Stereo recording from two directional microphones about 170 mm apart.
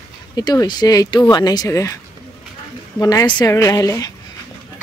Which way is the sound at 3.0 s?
20° left (ahead or behind).